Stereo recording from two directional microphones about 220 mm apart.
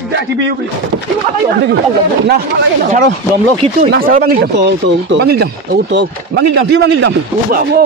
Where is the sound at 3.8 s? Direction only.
40° right (ahead or behind).